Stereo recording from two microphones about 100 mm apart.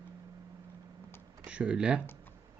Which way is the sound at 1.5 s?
10° right (ahead or behind).